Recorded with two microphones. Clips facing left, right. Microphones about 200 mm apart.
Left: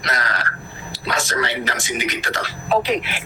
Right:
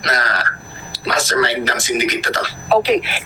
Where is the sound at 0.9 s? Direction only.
90° right.